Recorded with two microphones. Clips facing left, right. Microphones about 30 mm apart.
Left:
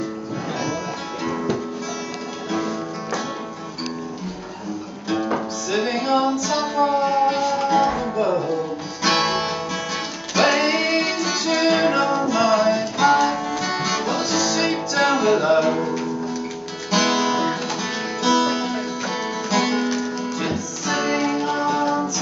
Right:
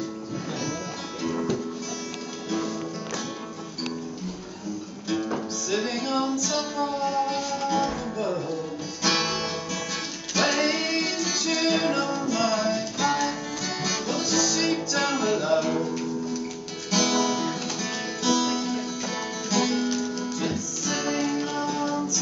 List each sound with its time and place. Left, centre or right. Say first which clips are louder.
1.2 s music: left 3 dB; left
5.1 s music: left 5 dB; left
16.9 s guitar: left 4 dB; left
18.2 s music: left 5 dB; left